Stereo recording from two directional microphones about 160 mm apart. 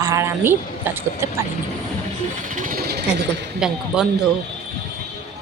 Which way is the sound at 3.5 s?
5° right (ahead or behind).